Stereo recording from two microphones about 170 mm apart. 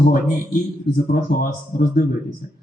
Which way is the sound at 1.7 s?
60° left (ahead or behind).